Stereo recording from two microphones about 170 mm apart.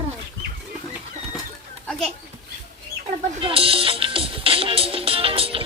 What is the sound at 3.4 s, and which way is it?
Music, 35° right (ahead or behind).